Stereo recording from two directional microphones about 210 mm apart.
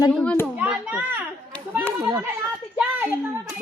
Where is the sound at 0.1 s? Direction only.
5° left (ahead or behind).